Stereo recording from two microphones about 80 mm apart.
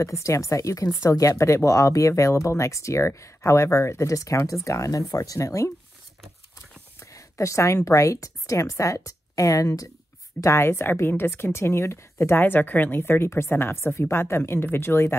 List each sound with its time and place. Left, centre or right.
0.0 s speech: left
7.0 s a woman's voice: left
10.4 s speech: left